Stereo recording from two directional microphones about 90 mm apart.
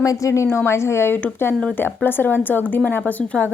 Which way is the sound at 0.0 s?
40° left (ahead or behind).